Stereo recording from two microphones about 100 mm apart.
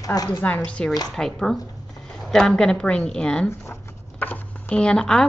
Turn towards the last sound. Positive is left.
turn(degrees=10)  # may be behind; listen again after turning